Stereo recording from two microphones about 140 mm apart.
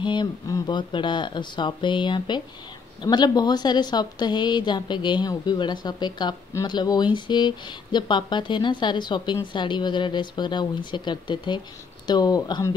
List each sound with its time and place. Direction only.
0.0 s a woman's voice: 35° left (ahead or behind)